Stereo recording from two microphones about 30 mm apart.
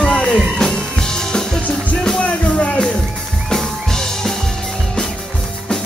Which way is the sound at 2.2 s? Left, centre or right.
Left.